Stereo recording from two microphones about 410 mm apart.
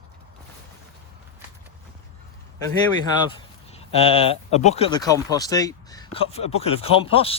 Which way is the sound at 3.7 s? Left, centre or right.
Centre.